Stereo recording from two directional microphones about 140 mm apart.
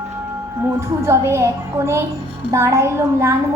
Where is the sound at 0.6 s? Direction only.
20° right (ahead or behind).